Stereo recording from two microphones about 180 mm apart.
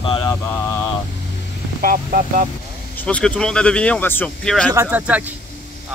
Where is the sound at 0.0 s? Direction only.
30° left (ahead or behind).